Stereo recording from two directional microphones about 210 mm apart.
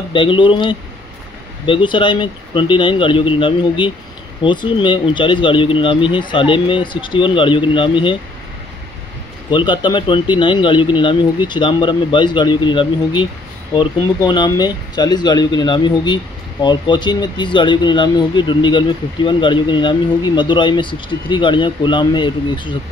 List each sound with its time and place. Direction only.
0.1 s speech: 25° left (ahead or behind)
9.5 s speech: 20° left (ahead or behind)